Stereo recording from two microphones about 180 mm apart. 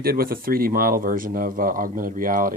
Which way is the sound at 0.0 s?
55° right (ahead or behind).